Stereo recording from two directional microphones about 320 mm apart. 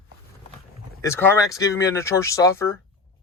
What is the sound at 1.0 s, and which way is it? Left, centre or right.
Speech, centre.